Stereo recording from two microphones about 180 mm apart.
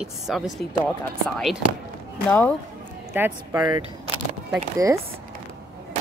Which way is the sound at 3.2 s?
10° right (ahead or behind).